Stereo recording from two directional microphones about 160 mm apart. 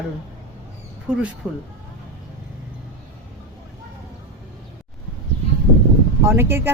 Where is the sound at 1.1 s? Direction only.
10° right (ahead or behind).